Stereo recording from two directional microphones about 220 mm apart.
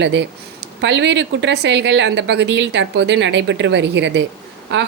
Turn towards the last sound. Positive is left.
turn(degrees=-55)  # may be behind; listen again after turning